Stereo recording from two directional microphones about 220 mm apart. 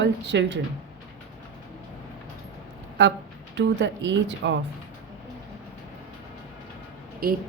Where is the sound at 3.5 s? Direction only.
55° right (ahead or behind).